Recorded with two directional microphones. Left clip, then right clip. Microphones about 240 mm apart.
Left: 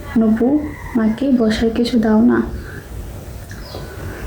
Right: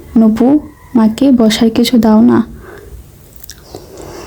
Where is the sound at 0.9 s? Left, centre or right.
Right.